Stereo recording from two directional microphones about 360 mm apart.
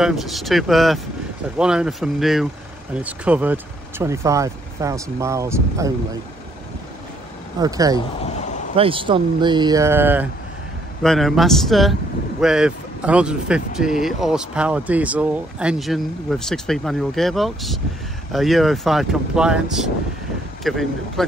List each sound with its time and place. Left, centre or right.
0.0 s speech: centre
7.6 s speech: centre
8.2 s a sound: centre
8.7 s speech: centre